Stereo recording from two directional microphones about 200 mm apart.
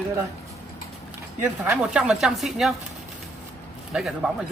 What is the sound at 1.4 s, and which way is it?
Speech, 10° right (ahead or behind).